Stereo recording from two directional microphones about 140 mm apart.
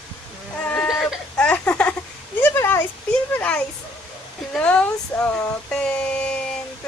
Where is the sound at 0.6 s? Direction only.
5° left (ahead or behind).